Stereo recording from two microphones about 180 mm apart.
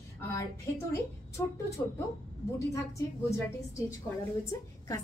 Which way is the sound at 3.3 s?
15° left (ahead or behind).